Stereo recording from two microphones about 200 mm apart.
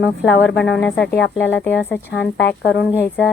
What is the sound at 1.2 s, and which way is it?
Speech, 60° left (ahead or behind).